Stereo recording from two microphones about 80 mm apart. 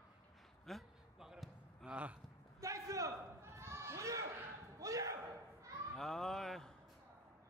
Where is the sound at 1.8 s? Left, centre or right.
Centre.